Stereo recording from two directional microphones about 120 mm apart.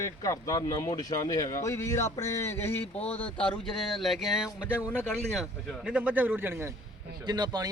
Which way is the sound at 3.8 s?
Centre (ahead or behind).